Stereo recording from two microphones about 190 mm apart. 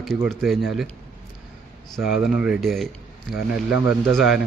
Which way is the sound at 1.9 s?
5° right (ahead or behind).